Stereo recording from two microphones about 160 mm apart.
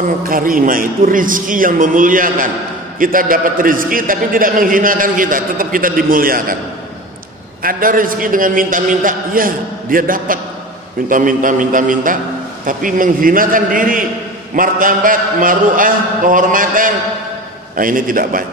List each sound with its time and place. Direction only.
0.2 s a man's voice: 60° right (ahead or behind)
7.6 s a man's voice: 60° right (ahead or behind)